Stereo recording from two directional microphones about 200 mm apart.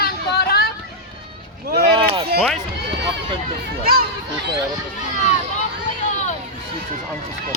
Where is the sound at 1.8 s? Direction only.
25° right (ahead or behind).